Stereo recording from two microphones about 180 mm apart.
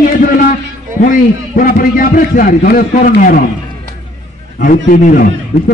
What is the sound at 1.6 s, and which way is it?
A man's voice, 50° left (ahead or behind).